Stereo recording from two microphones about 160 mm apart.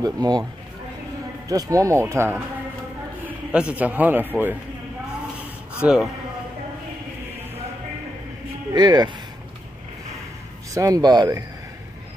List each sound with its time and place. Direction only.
0.0 s speech: 25° right (ahead or behind)
1.5 s a man's voice: 20° right (ahead or behind)
5.8 s speech: 5° right (ahead or behind)
8.7 s speech: 25° right (ahead or behind)
10.7 s speech: 20° right (ahead or behind)